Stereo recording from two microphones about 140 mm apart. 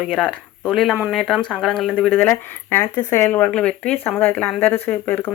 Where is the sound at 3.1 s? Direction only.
15° left (ahead or behind).